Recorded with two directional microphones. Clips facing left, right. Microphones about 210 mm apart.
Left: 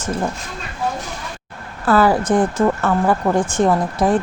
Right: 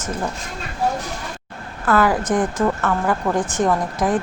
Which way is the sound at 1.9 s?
30° left (ahead or behind).